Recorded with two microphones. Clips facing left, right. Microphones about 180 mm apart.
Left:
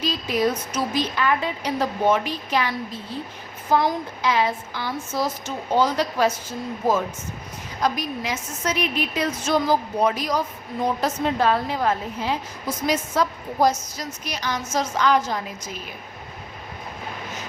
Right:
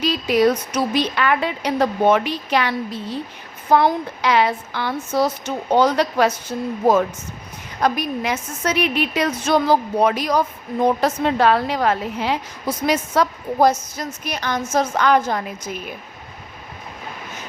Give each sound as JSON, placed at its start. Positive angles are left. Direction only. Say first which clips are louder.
{"t": 0.0, "sound": "a woman's voice", "louder": "right 6 dB", "side_deg": -70}
{"t": 7.8, "sound": "a woman's voice", "louder": "right 4 dB", "side_deg": -60}